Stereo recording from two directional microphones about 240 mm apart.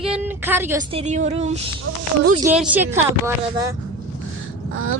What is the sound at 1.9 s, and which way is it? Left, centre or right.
Speech, right.